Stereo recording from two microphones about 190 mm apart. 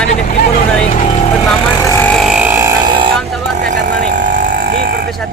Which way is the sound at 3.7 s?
45° right (ahead or behind).